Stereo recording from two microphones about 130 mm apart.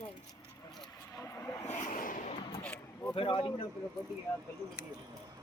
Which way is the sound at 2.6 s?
10° left (ahead or behind).